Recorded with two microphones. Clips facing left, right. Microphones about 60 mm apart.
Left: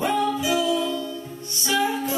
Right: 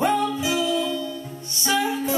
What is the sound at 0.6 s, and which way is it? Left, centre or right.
Music, left.